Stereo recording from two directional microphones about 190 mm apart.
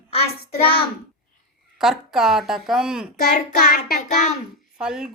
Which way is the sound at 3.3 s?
45° left (ahead or behind).